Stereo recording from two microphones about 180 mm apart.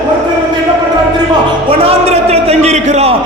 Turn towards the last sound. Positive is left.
turn(degrees=-40)  # may be behind; listen again after turning